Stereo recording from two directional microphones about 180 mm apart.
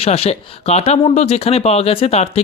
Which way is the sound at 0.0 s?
35° left (ahead or behind).